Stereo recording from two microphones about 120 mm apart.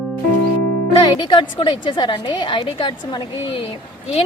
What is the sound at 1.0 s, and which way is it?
A woman's voice, 40° left (ahead or behind).